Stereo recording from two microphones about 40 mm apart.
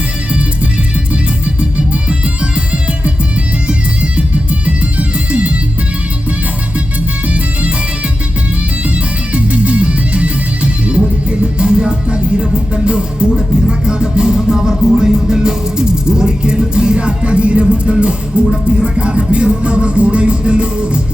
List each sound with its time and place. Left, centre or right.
1.5 s music: right
4.6 s music: right
7.3 s music: right
9.3 s music: right